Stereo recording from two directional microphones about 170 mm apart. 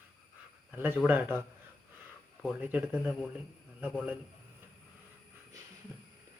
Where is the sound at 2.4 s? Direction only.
10° right (ahead or behind).